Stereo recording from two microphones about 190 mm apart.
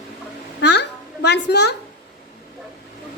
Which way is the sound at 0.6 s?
65° left (ahead or behind).